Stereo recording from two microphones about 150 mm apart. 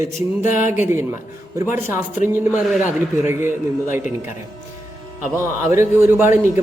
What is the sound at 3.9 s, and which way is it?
Speech, 60° left (ahead or behind).